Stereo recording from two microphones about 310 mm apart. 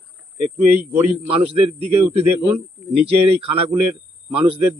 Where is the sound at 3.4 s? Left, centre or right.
Right.